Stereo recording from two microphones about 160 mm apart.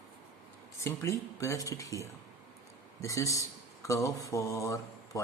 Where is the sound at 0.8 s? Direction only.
15° left (ahead or behind).